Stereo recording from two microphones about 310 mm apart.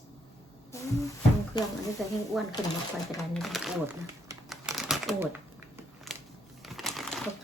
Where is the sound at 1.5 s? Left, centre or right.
Centre.